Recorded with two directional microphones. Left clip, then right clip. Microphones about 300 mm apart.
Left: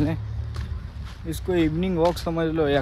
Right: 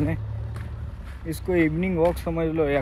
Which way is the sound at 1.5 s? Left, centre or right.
Centre.